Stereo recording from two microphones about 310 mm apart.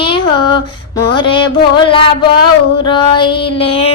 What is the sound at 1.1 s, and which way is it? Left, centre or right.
Child singing, centre.